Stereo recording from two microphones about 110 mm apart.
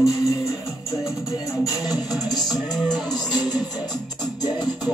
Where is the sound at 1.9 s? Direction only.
35° left (ahead or behind).